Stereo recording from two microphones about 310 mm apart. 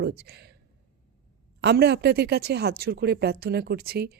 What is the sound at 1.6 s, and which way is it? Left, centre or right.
Speech, right.